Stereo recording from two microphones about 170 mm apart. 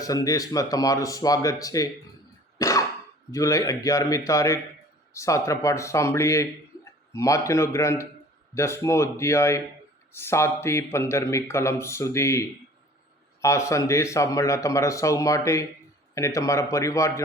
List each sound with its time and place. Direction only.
0.0 s speech: 20° left (ahead or behind)
2.6 s cough: 20° left (ahead or behind)
3.3 s a man's voice: 20° left (ahead or behind)